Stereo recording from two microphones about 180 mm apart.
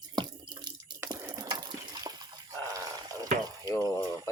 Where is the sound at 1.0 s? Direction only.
10° right (ahead or behind).